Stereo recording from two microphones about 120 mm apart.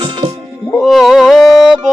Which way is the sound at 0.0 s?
45° right (ahead or behind).